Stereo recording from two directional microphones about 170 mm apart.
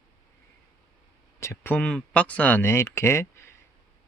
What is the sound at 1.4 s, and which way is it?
Speech, 15° left (ahead or behind).